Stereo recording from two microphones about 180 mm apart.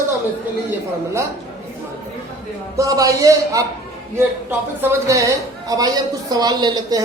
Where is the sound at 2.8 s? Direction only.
20° right (ahead or behind).